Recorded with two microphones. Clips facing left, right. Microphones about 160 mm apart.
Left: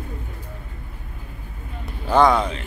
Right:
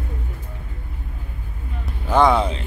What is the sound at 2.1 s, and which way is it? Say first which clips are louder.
Speech: even; 25° right (ahead or behind).